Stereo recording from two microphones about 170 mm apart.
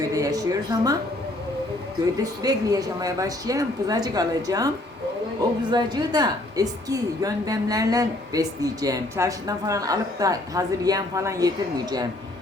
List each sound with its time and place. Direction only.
0.1 s a woman's voice: 20° right (ahead or behind)
2.4 s a woman's voice: 20° right (ahead or behind)
5.7 s a woman's voice: 25° right (ahead or behind)